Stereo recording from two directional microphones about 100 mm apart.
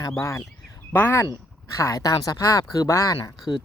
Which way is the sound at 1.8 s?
35° left (ahead or behind).